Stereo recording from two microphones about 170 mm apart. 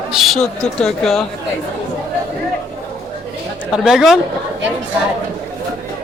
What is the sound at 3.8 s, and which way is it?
Speech, centre (ahead or behind).